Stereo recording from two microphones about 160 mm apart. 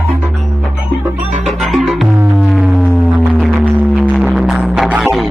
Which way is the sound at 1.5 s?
Centre (ahead or behind).